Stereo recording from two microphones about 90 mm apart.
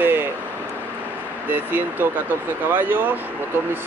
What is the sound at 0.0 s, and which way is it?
Vehicle, 25° right (ahead or behind).